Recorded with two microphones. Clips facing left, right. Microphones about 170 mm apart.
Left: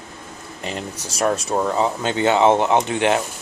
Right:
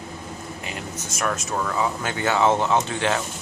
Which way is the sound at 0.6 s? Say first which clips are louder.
Left 7 dB; 35° left (ahead or behind).